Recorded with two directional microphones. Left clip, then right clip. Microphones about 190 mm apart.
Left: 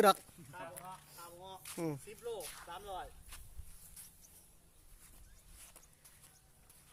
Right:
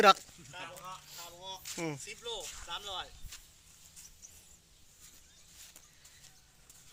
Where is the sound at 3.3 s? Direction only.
10° left (ahead or behind).